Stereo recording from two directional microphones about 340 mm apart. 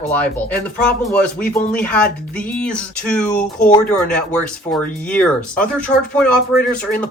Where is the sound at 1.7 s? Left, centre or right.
Centre.